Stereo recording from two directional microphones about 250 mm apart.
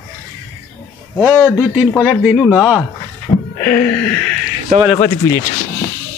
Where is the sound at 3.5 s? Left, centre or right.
Centre.